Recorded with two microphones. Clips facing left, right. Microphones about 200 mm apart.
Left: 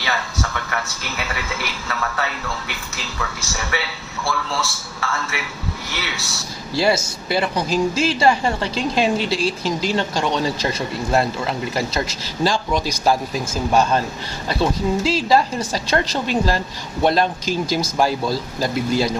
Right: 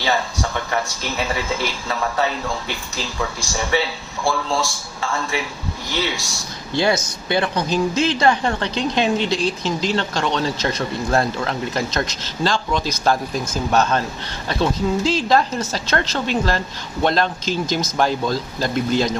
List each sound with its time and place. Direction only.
0.0 s a man's voice: 30° right (ahead or behind)
6.1 s a man's voice: 15° right (ahead or behind)
6.7 s speech: 5° left (ahead or behind)